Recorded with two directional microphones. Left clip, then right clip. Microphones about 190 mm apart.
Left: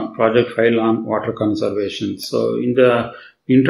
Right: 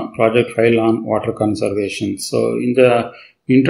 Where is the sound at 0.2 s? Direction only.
30° right (ahead or behind).